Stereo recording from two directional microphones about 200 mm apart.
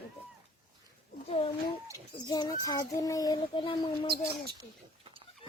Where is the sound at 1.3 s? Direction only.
30° left (ahead or behind).